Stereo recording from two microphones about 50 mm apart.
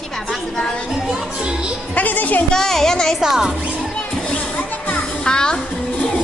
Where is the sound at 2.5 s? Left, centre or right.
Centre.